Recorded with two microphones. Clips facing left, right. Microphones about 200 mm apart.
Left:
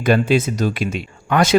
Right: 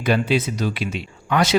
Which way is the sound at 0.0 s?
50° left (ahead or behind).